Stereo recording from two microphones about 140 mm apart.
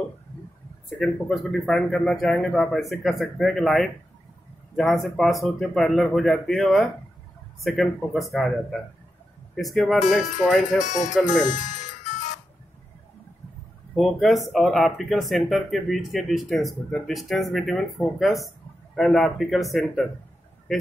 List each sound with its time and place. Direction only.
0.8 s speech: 5° left (ahead or behind)
10.9 s speech: 60° left (ahead or behind)
13.9 s speech: centre (ahead or behind)